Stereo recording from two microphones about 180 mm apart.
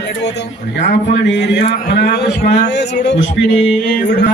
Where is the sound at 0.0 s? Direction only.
70° left (ahead or behind).